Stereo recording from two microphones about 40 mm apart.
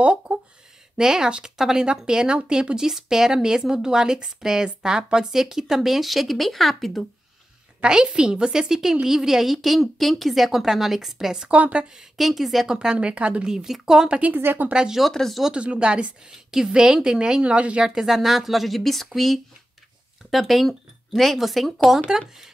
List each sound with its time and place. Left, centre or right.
0.0 s a sound: right
0.9 s a woman's voice: centre
7.8 s a woman's voice: centre
11.5 s a woman's voice: right
12.2 s a woman's voice: centre
12.8 s a woman's voice: right
13.5 s speech: centre
14.3 s a woman's voice: right
14.7 s a woman's voice: right
15.1 s a woman's voice: centre
15.5 s a woman's voice: right
16.3 s a woman's voice: centre; by 17.8 s right
17.8 s a woman's voice: centre